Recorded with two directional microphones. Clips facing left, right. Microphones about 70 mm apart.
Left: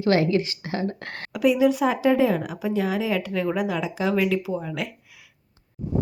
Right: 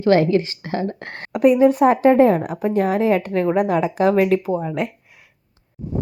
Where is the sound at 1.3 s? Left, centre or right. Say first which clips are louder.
Right 6 dB; right.